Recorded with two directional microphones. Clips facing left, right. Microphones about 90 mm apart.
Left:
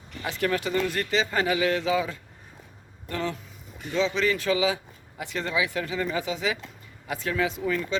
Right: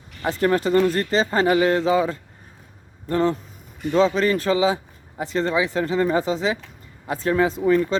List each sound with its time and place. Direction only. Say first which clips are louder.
0.2 s a man's voice: right 7 dB; 35° right (ahead or behind)